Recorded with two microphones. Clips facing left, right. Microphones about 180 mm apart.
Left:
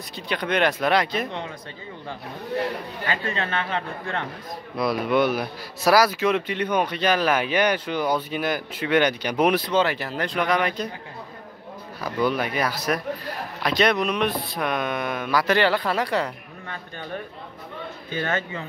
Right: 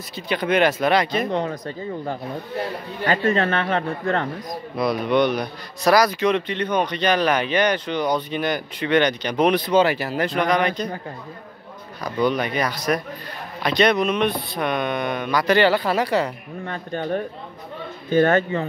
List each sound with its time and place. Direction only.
0.1 s speech: centre (ahead or behind)
1.3 s speech: 40° right (ahead or behind)
3.1 s speech: 40° right (ahead or behind)
4.7 s speech: centre (ahead or behind)
9.7 s speech: 10° right (ahead or behind)
12.0 s speech: 5° left (ahead or behind)
16.6 s speech: 50° right (ahead or behind)